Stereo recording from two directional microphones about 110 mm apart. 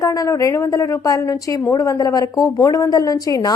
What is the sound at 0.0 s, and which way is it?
Speech, 30° left (ahead or behind).